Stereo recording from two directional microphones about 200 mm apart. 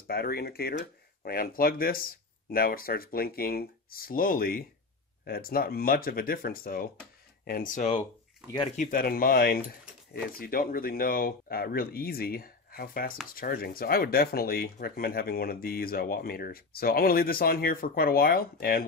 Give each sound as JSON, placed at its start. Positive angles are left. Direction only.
{"t": 0.0, "sound": "speech", "side_deg": 50}